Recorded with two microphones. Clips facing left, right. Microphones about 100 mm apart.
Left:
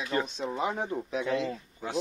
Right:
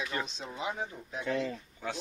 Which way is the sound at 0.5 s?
50° left (ahead or behind).